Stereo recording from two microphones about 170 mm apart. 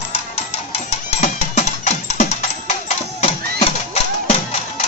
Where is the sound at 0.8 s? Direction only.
45° left (ahead or behind).